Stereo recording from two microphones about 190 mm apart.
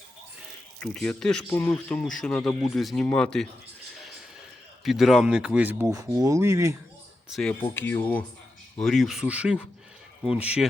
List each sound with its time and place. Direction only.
0.8 s speech: 5° left (ahead or behind)
4.8 s speech: centre (ahead or behind); by 6.7 s 15° right (ahead or behind)
7.3 s speech: 5° left (ahead or behind)